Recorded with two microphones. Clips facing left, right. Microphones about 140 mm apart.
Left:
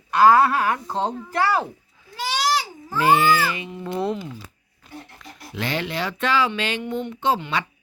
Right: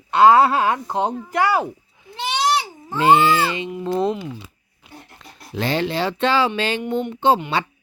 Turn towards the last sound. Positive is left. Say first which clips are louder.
# right 5 dB
turn(degrees=-30)  # may be behind; listen again after turning